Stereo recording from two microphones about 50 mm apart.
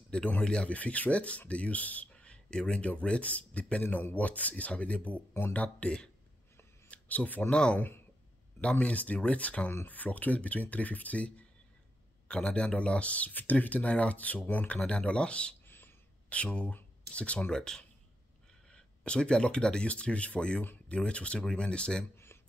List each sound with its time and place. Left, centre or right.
0.4 s speech: centre
0.7 s speech: left
2.1 s a man's voice: left
3.8 s speech: left
8.5 s speech: left
14.8 s speech: centre
15.6 s a sound: left
16.3 s speech: left
17.5 s speech: centre
22.1 s a sound: left